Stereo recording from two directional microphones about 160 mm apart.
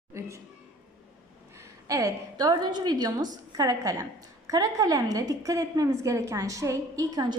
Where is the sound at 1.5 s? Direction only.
20° right (ahead or behind).